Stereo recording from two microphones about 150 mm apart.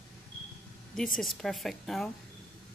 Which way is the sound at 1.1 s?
5° left (ahead or behind).